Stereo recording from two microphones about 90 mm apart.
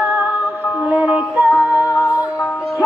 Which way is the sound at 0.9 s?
15° right (ahead or behind).